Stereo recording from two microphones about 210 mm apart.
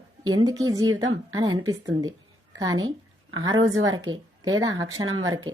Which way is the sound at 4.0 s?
20° right (ahead or behind).